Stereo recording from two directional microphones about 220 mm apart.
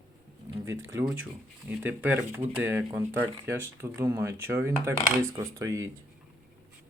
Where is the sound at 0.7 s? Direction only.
65° right (ahead or behind).